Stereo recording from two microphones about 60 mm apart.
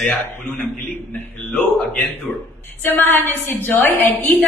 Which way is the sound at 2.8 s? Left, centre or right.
Left.